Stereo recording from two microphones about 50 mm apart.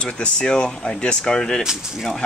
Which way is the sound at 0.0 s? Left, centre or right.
Centre.